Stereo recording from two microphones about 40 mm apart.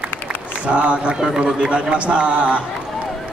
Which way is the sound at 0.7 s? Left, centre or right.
Right.